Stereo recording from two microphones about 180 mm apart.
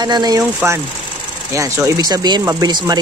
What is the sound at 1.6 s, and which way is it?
Speech, 20° right (ahead or behind).